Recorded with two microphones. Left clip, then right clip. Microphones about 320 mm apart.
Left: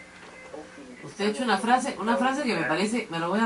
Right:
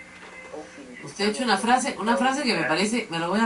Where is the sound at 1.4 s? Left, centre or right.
Centre.